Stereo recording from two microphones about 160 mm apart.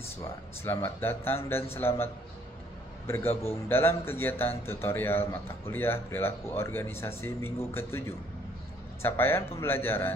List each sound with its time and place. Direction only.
0.2 s a man's voice: 15° left (ahead or behind)
3.1 s a man's voice: 15° left (ahead or behind)
9.0 s a man's voice: 15° left (ahead or behind)